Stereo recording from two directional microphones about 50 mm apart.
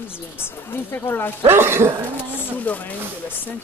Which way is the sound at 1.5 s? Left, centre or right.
Right.